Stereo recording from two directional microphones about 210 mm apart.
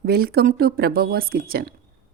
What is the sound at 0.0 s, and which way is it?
Speech, 45° right (ahead or behind).